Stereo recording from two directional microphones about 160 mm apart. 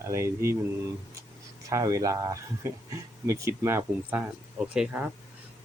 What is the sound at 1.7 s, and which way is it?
Speech, 20° right (ahead or behind).